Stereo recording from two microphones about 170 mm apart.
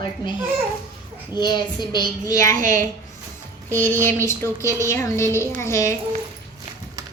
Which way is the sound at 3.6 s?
10° left (ahead or behind).